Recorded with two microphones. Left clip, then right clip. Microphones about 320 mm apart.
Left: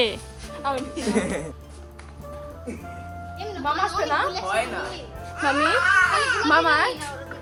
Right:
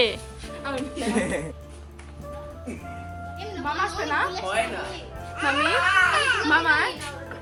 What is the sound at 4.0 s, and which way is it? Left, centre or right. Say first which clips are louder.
Speech: even; left.